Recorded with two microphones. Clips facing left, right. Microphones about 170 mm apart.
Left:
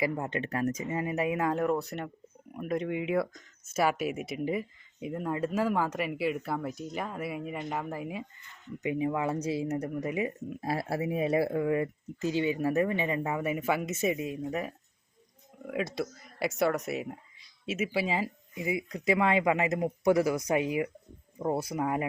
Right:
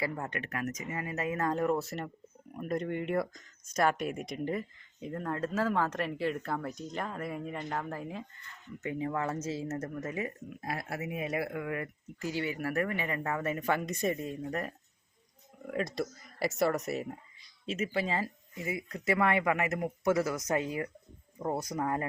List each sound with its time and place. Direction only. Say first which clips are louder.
0.0 s speech: left 5 dB; 20° left (ahead or behind)
10.6 s speech: left 6 dB; 30° left (ahead or behind); by 22.0 s 10° left (ahead or behind)